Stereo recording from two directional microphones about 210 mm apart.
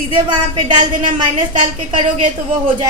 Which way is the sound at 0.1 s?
20° right (ahead or behind).